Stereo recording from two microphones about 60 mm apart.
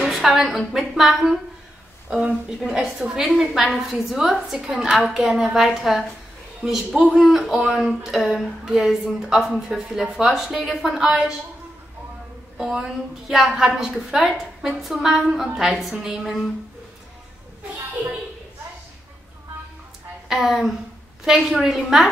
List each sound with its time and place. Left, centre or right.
0.0 s a woman's voice: centre
2.0 s a woman's voice: centre
12.5 s speech: centre
20.2 s a woman's voice: centre